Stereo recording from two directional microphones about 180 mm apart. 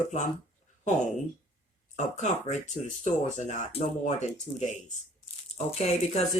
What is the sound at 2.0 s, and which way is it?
Speech, 40° left (ahead or behind).